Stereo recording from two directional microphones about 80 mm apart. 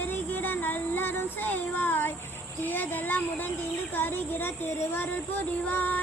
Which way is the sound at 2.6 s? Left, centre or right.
Left.